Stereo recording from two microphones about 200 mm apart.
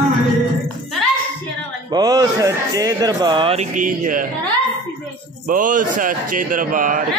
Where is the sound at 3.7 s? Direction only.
40° right (ahead or behind).